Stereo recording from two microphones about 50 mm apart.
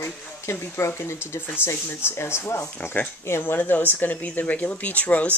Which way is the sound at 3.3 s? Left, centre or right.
Left.